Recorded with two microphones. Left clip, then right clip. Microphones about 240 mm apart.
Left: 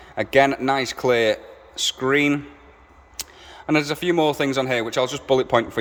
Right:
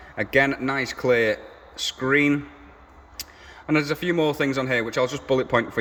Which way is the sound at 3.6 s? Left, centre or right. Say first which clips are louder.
Left 2 dB; centre.